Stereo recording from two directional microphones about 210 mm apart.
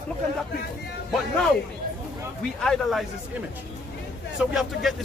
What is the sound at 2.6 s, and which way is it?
Speech, centre (ahead or behind).